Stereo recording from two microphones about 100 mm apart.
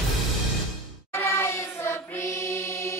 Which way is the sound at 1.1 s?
25° left (ahead or behind).